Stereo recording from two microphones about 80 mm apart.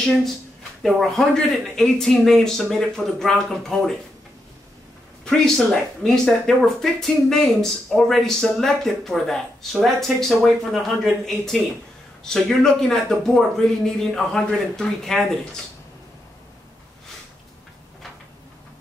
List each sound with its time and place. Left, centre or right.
0.8 s speech: centre
6.0 s speech: centre